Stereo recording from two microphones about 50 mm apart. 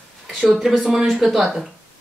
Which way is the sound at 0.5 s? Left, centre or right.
Centre.